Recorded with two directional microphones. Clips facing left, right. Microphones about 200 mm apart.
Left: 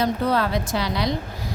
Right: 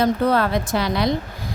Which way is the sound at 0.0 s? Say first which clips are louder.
Right 3 dB; 55° right (ahead or behind).